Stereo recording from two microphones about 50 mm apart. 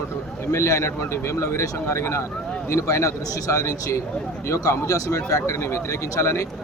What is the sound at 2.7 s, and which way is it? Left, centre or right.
A man's voice, left.